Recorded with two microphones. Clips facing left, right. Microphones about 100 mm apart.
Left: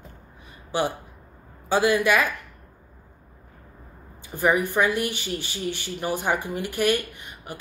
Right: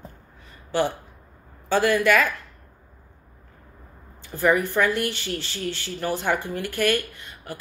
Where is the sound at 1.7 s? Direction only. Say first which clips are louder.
Right 1 dB; 15° left (ahead or behind).